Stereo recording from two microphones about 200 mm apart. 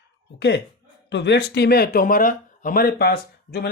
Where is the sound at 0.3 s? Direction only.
60° left (ahead or behind).